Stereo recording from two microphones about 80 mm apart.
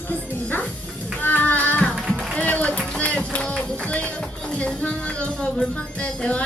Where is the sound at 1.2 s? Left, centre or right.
Left.